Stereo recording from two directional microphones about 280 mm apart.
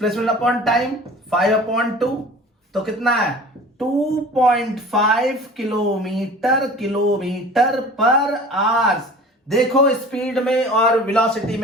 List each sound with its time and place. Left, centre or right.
0.0 s speech: centre
4.4 s speech: centre